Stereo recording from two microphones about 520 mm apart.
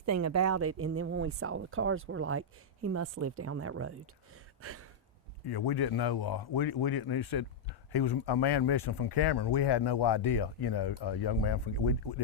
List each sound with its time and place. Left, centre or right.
0.0 s speech: right
4.6 s a sound: right
5.5 s speech: left